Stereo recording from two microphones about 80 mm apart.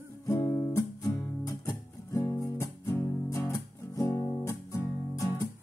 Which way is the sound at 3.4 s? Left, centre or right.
Left.